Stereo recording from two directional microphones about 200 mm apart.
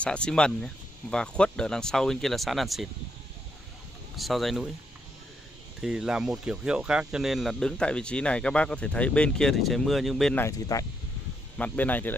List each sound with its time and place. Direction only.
0.0 s speech: 5° left (ahead or behind)
4.2 s speech: centre (ahead or behind)
5.8 s speech: 5° right (ahead or behind)
10.4 s speech: 15° left (ahead or behind)